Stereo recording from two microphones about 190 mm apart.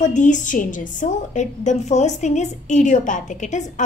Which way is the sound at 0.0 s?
40° left (ahead or behind).